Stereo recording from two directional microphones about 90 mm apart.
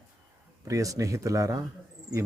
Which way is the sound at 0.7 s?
35° right (ahead or behind).